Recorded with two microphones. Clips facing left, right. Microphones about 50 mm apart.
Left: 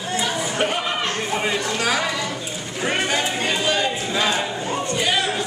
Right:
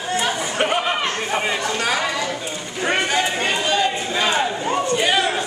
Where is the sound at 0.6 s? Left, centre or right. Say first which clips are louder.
Right 4 dB; centre.